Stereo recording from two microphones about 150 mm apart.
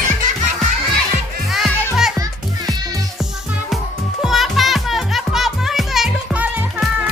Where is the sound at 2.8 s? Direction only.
25° right (ahead or behind).